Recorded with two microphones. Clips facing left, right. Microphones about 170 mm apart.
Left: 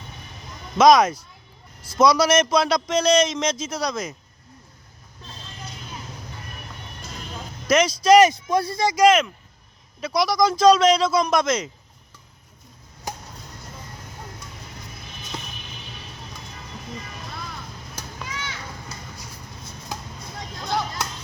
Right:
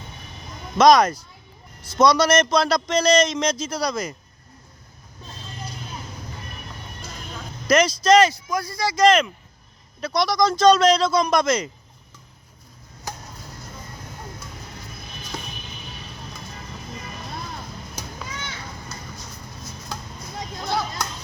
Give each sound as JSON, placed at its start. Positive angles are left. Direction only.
{"t": 0.8, "sound": "speech", "side_deg": 5}
{"t": 7.7, "sound": "speech", "side_deg": 0}
{"t": 8.0, "sound": "speech", "side_deg": 15}
{"t": 8.4, "sound": "speech", "side_deg": 30}
{"t": 9.0, "sound": "speech", "side_deg": 5}
{"t": 20.7, "sound": "chop", "side_deg": -5}